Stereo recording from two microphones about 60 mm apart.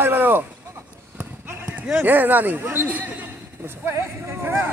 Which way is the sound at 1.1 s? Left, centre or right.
Right.